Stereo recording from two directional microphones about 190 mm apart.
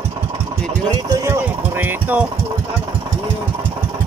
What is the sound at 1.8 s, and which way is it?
Engine, 10° right (ahead or behind).